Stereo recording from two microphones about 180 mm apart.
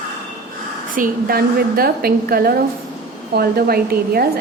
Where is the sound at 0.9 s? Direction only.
50° right (ahead or behind).